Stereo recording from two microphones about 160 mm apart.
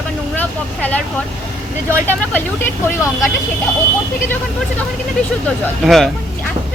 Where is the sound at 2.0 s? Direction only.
10° left (ahead or behind).